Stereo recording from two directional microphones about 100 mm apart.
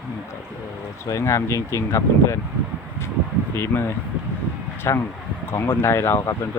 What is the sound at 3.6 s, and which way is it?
Speech, 25° left (ahead or behind).